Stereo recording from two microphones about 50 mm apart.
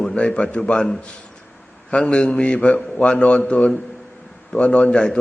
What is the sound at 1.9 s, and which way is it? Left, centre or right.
A man's voice, centre.